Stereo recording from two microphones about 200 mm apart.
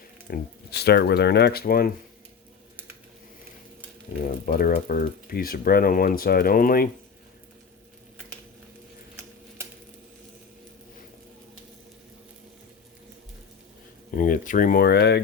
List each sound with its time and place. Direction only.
0.3 s speech: 55° left (ahead or behind)
4.4 s speech: 45° left (ahead or behind)
14.2 s speech: 40° left (ahead or behind)